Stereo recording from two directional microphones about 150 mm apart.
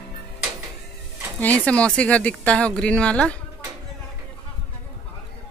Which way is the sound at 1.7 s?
10° left (ahead or behind).